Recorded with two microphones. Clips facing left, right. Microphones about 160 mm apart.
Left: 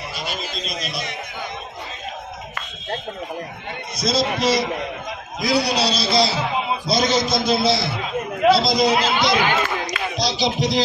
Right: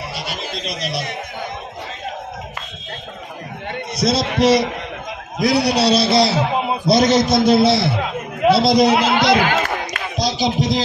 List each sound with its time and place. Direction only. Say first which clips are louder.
0.1 s a man's voice: right 2 dB; 75° right (ahead or behind)
3.9 s a man's voice: right 2 dB; 65° right (ahead or behind)
9.5 s a sound: right 1 dB; 50° right (ahead or behind)